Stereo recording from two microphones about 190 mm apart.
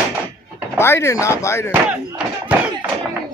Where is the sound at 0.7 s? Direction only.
10° left (ahead or behind).